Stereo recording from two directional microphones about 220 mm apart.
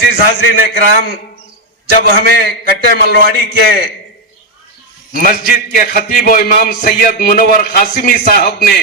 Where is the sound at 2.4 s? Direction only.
50° left (ahead or behind).